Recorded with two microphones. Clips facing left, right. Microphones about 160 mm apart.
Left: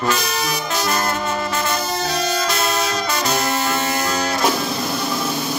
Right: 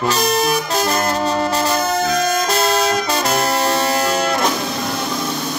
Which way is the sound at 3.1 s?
35° right (ahead or behind).